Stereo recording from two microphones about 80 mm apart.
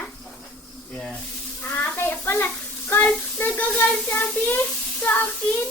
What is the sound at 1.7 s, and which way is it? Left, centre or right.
A child's voice, left.